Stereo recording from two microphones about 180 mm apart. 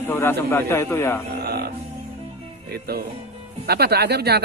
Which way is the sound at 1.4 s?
60° right (ahead or behind).